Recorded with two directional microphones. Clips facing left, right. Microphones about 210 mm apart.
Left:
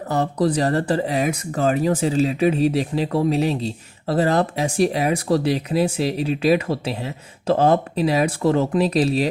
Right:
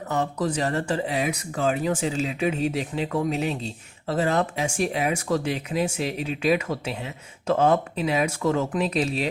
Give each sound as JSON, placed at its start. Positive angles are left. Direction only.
{"t": 0.1, "sound": "speech", "side_deg": 35}